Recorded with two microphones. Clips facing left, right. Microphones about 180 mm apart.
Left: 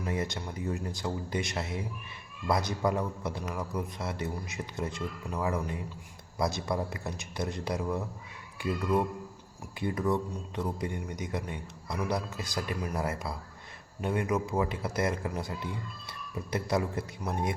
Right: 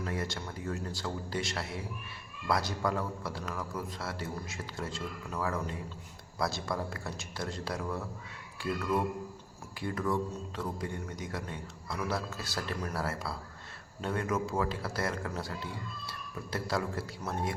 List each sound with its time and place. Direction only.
0.0 s speech: 20° left (ahead or behind)
9.8 s speech: 20° left (ahead or behind)